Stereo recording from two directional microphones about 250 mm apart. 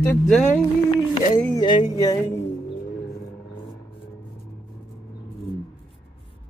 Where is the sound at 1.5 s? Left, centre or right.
Centre.